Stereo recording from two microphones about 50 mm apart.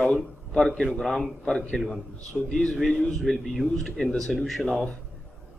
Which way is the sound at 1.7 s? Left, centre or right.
Centre.